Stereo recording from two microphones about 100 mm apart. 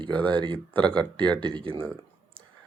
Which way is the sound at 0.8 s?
10° left (ahead or behind).